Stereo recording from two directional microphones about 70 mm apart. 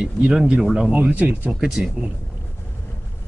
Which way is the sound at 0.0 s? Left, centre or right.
Centre.